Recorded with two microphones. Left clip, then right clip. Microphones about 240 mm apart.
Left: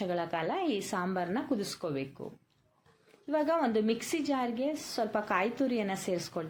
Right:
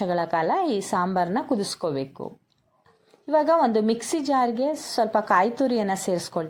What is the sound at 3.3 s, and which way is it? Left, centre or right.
Speech, right.